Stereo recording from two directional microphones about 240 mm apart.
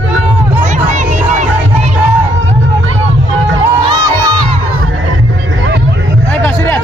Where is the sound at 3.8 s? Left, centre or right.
Centre.